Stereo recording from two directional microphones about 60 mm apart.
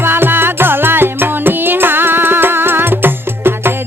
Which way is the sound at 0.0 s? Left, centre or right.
Right.